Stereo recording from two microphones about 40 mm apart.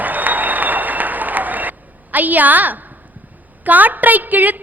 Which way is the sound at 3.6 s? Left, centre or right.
Right.